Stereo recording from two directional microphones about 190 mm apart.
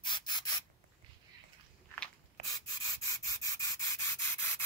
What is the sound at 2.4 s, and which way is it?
Rub, 20° left (ahead or behind).